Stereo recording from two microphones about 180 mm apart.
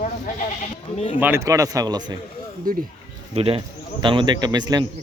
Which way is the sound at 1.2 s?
15° right (ahead or behind).